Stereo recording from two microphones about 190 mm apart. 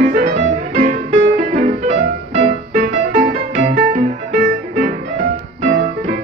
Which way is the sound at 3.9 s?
40° right (ahead or behind).